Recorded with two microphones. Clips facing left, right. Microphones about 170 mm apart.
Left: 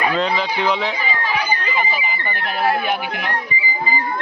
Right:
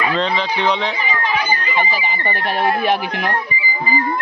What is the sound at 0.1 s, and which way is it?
Speech, 5° left (ahead or behind).